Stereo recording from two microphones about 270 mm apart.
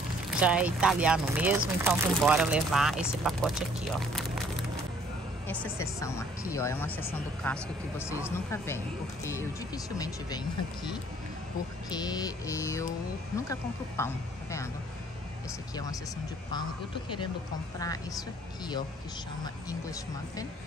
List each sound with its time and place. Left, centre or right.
0.3 s speech: centre
5.5 s speech: centre
9.2 s speech: centre
11.9 s speech: centre
16.5 s speech: centre
19.4 s speech: centre